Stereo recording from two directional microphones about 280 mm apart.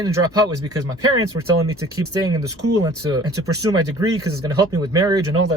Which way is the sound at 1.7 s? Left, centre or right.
Right.